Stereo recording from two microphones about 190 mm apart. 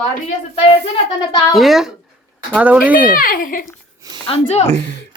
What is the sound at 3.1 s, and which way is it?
Speech, 45° left (ahead or behind).